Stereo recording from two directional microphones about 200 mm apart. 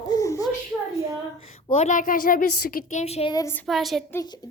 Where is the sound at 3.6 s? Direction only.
Centre (ahead or behind).